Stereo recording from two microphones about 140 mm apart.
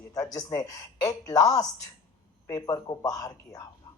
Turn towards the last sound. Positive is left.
turn(degrees=25)  # may be behind; listen again after turning